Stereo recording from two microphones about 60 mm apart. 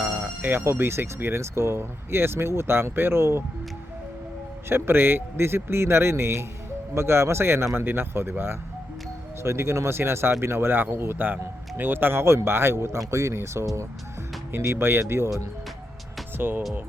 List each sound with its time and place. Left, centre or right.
0.0 s music: right
0.6 s speech: right
4.7 s speech: right
13.1 s speech: right
14.5 s speech: right
16.4 s speech: right